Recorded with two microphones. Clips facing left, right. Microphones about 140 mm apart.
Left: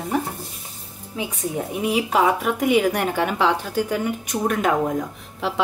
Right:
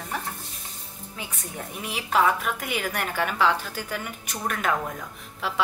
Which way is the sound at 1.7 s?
5° left (ahead or behind).